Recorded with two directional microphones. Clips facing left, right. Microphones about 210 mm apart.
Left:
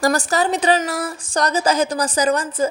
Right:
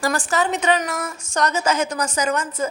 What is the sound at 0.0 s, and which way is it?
Speech, 40° left (ahead or behind).